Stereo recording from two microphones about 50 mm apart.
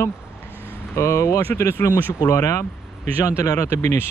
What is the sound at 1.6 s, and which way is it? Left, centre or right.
Speech, left.